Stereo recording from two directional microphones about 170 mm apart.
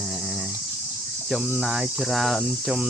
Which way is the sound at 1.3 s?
5° right (ahead or behind).